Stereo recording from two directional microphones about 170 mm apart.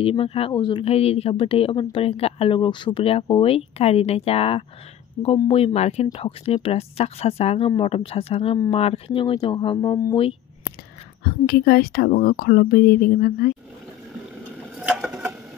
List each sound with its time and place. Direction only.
0.0 s speech: 30° left (ahead or behind)
11.2 s speech: 65° left (ahead or behind)
15.0 s a sound: centre (ahead or behind)